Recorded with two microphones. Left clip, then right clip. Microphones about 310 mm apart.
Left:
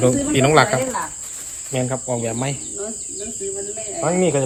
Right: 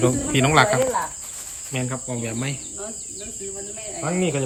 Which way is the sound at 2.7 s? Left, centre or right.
Centre.